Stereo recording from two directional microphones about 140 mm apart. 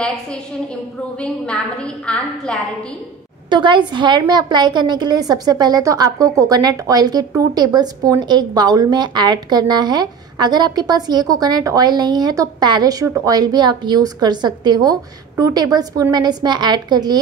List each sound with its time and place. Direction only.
1.2 s a woman's voice: 5° left (ahead or behind)
3.4 s a woman's voice: 35° right (ahead or behind)